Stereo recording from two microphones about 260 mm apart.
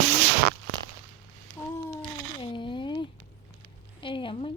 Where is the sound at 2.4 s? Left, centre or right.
Centre.